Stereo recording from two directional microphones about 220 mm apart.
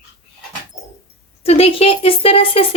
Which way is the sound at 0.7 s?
30° left (ahead or behind).